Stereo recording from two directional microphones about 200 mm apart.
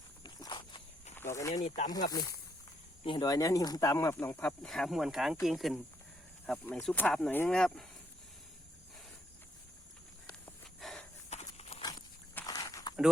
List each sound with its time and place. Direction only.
0.2 s walk: 20° left (ahead or behind)
1.1 s speech: 10° left (ahead or behind)
1.6 s speech: 35° left (ahead or behind)
3.0 s speech: 25° left (ahead or behind); by 7.9 s 5° left (ahead or behind)
10.8 s walk: centre (ahead or behind)
11.3 s horse: 35° left (ahead or behind)
11.9 s dog: 15° left (ahead or behind)